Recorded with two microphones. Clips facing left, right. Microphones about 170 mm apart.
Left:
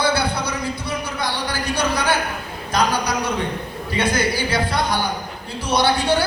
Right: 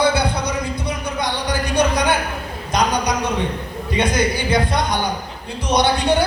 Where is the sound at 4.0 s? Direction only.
20° right (ahead or behind).